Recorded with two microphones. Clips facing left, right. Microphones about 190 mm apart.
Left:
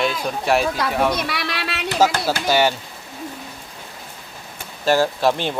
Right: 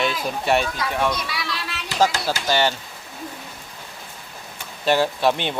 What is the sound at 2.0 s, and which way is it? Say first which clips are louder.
Speech: left 2 dB; 10° left (ahead or behind).